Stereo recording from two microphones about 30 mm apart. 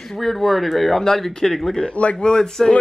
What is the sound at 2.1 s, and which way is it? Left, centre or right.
Speech, left.